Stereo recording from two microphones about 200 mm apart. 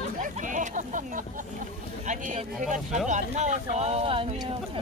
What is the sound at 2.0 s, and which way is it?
Speech, 40° right (ahead or behind).